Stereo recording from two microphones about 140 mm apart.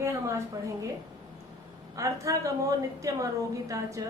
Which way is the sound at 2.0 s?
25° right (ahead or behind).